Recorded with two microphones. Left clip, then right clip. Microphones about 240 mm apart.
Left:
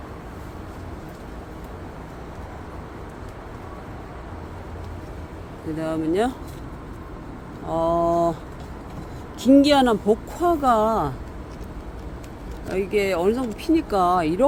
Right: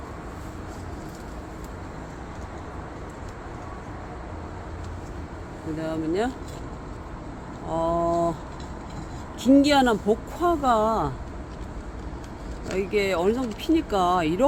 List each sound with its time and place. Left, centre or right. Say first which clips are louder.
5.8 s speech: left 4 dB; left
7.7 s a sound: left 3 dB; centre
9.5 s speech: left 3 dB; centre
12.6 s speech: left 2 dB; centre